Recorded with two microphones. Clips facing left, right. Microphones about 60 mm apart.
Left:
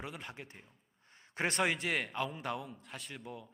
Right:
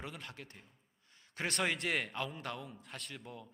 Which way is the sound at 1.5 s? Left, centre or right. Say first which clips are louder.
Left 2 dB; centre.